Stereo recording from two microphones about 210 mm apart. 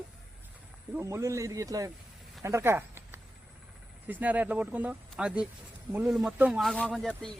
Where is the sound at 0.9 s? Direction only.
15° right (ahead or behind).